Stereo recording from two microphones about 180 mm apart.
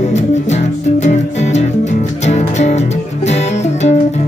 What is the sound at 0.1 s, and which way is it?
Music, 40° left (ahead or behind).